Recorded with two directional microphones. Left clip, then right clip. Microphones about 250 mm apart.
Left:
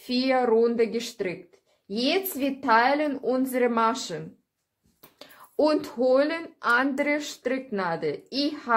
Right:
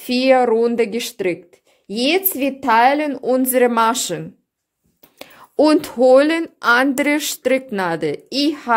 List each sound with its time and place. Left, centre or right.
0.0 s speech: right